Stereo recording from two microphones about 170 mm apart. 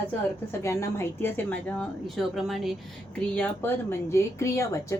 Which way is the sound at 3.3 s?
10° left (ahead or behind).